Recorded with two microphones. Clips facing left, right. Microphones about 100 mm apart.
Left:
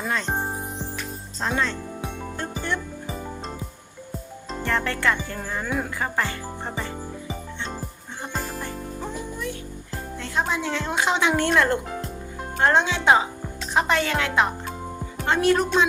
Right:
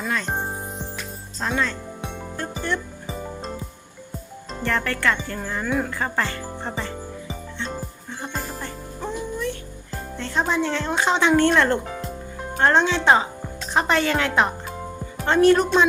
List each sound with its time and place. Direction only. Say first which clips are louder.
0.0 s music: right 1 dB; 20° left (ahead or behind)
0.3 s music: even; centre (ahead or behind)
1.4 s speech: even; 20° left (ahead or behind)
2.4 s music: right 2 dB; 20° left (ahead or behind)
4.6 s speech: right 1 dB; 20° left (ahead or behind)
8.2 s music: even; 5° left (ahead or behind)
10.2 s a woman's voice: right 3 dB; 5° left (ahead or behind)